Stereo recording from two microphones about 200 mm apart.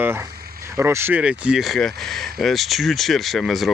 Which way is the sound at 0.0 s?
10° right (ahead or behind).